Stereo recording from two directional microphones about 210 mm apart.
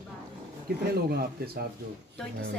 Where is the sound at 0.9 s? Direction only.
50° right (ahead or behind).